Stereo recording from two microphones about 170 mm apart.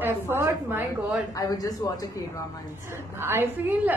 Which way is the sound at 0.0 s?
15° right (ahead or behind).